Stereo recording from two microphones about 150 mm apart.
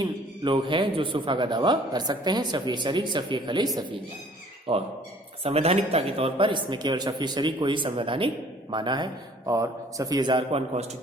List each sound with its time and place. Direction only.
0.0 s a man's voice: 30° right (ahead or behind)
4.7 s a man's voice: 35° right (ahead or behind)